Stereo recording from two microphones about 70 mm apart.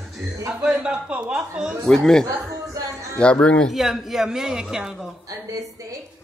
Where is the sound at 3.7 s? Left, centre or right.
Centre.